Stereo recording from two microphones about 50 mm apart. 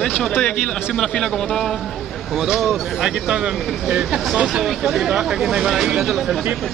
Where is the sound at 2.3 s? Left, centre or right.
Centre.